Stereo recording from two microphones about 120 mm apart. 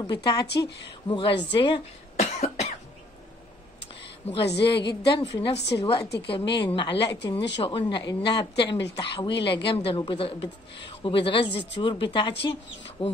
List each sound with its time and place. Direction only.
0.0 s a woman's voice: 35° left (ahead or behind)
2.1 s cough: 70° left (ahead or behind)
4.3 s a woman's voice: 45° left (ahead or behind)
5.5 s a woman's voice: 60° left (ahead or behind)
5.9 s a woman's voice: 45° left (ahead or behind)